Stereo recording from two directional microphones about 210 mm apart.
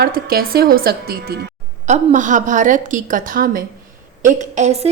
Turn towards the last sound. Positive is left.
turn(degrees=-35)  # may be behind; listen again after turning